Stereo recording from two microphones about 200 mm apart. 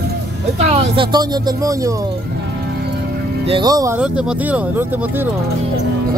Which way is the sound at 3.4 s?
20° right (ahead or behind).